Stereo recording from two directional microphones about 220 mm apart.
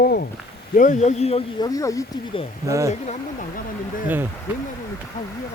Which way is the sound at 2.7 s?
15° right (ahead or behind).